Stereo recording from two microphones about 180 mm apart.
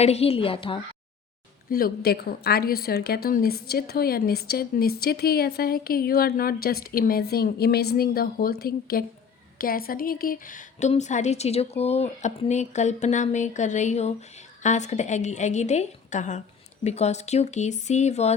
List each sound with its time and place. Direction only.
0.0 s a woman's voice: 35° left (ahead or behind)
1.7 s a woman's voice: 60° left (ahead or behind); by 18.3 s 35° left (ahead or behind)